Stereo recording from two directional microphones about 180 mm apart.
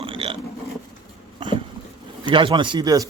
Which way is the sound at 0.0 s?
30° right (ahead or behind).